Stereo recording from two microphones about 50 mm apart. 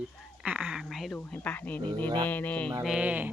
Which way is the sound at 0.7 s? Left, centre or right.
Centre.